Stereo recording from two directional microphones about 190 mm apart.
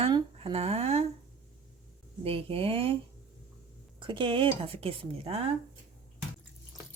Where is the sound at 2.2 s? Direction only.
30° right (ahead or behind).